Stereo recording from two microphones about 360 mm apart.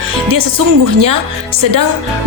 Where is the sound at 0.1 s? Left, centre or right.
Right.